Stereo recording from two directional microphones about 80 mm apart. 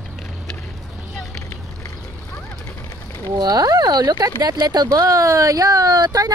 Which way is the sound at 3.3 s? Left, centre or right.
Right.